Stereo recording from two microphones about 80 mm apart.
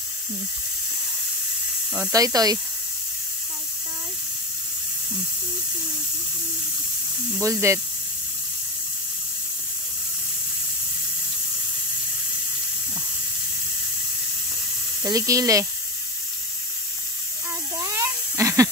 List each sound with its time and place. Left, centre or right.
2.1 s speech: right
7.3 s speech: right
15.0 s speech: right
17.7 s a sound: right